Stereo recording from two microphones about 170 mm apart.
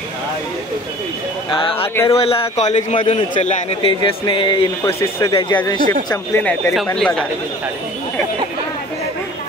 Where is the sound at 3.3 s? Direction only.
45° left (ahead or behind).